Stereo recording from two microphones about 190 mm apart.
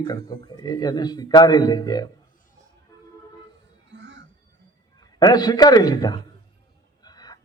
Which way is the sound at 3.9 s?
70° right (ahead or behind).